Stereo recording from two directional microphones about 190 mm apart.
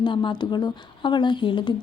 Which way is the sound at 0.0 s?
25° left (ahead or behind).